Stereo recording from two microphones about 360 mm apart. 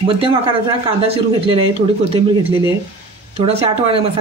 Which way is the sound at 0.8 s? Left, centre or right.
Centre.